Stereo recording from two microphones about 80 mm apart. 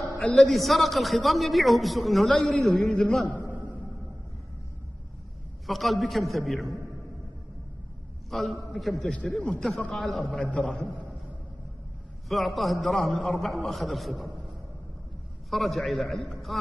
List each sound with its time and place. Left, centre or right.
0.2 s a man's voice: centre
0.5 s a man's voice: centre
5.7 s a man's voice: centre
8.3 s a man's voice: centre
10.4 s a man's voice: centre
10.7 s a man's voice: centre
12.3 s a man's voice: centre
15.5 s a man's voice: centre